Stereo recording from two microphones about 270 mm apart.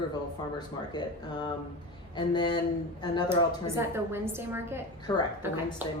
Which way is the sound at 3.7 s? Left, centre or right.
Centre.